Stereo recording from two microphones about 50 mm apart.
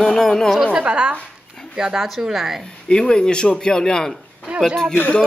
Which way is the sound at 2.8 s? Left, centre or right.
Centre.